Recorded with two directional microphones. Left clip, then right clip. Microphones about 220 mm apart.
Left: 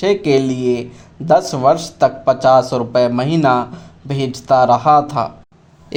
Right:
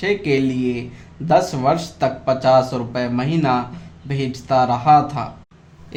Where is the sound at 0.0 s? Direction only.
30° left (ahead or behind).